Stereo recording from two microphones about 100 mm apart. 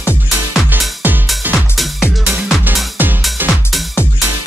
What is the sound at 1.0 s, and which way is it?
Music, 20° right (ahead or behind).